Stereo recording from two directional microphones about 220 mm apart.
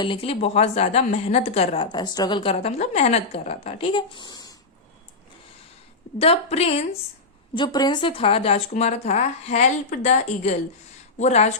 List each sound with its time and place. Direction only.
0.0 s speech: 25° left (ahead or behind)
6.1 s speech: 25° left (ahead or behind)